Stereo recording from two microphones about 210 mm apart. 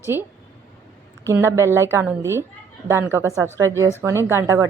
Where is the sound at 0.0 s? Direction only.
10° right (ahead or behind).